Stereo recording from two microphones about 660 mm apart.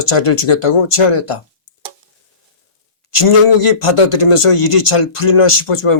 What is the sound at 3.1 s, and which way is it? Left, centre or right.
Speech, left.